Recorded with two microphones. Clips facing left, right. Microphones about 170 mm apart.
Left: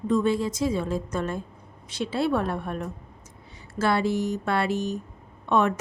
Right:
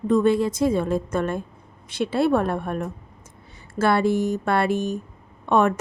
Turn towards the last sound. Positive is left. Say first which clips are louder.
# right 3 dB
turn(degrees=-50)  # may be behind; listen again after turning